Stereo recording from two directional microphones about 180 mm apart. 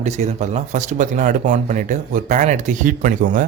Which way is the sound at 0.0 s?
40° right (ahead or behind).